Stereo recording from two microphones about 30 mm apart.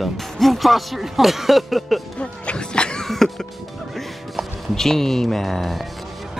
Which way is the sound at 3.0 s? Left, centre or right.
Centre.